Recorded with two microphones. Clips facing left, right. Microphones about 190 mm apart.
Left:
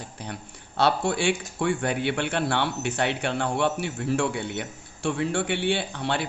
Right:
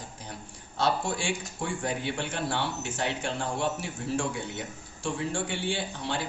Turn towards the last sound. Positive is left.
turn(degrees=65)  # may be behind; listen again after turning